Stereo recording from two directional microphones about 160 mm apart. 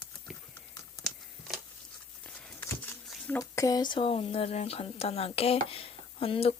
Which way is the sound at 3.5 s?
20° left (ahead or behind).